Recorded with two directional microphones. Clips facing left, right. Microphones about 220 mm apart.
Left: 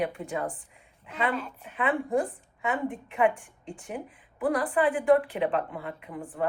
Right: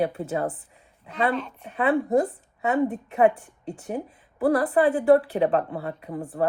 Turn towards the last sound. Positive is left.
turn(degrees=-40)  # may be behind; listen again after turning